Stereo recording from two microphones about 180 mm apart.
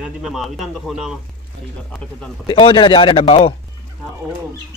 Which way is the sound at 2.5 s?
30° left (ahead or behind).